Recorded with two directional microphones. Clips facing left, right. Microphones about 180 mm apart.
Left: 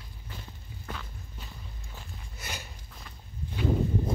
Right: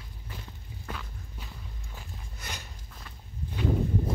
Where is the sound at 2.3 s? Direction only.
5° left (ahead or behind).